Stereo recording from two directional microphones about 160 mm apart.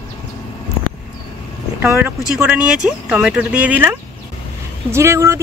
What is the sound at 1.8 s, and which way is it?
Speech, 10° right (ahead or behind).